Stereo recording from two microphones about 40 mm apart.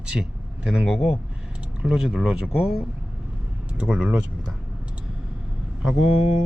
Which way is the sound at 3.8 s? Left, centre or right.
Right.